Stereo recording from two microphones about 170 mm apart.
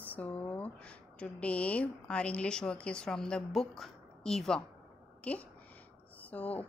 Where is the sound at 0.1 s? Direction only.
10° left (ahead or behind).